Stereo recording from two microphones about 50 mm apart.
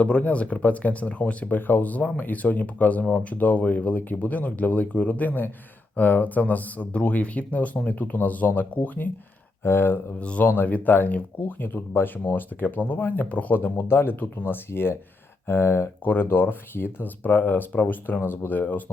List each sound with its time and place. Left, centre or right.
0.0 s speech: left
9.6 s speech: left
10.2 s speech: left
10.4 s speech: left
13.2 s speech: left
13.8 s speech: left